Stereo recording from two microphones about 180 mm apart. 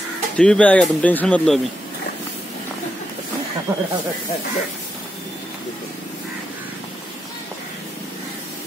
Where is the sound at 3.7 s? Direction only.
20° right (ahead or behind).